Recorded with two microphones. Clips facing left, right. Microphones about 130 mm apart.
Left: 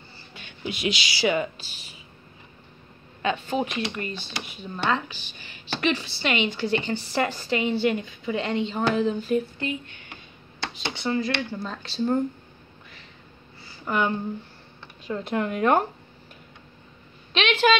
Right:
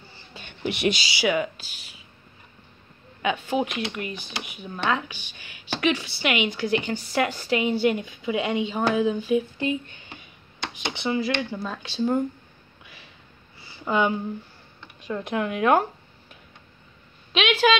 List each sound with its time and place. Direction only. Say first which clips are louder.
0.7 s speech: right 4 dB; 65° right (ahead or behind)
1.2 s speech: even; 5° right (ahead or behind)
3.2 s a woman's voice: right 1 dB; 10° right (ahead or behind)
9.6 s a woman's voice: right 4 dB; 25° right (ahead or behind); by 12.2 s 5° right (ahead or behind)
13.8 s a woman's voice: right 2 dB; 15° right (ahead or behind)
15.0 s speech: even; centre (ahead or behind)
17.3 s speech: even; 5° right (ahead or behind)